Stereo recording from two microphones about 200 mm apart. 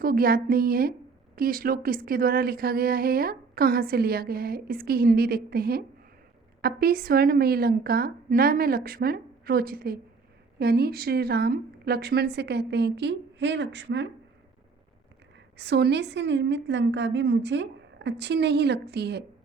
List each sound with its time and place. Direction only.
0.0 s a woman's voice: 45° right (ahead or behind); by 14.1 s 60° right (ahead or behind)
15.5 s a woman's voice: 55° right (ahead or behind)